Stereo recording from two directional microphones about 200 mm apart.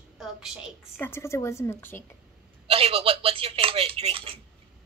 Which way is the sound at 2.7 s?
30° right (ahead or behind).